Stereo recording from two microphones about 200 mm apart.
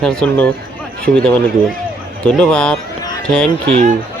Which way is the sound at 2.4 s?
5° left (ahead or behind).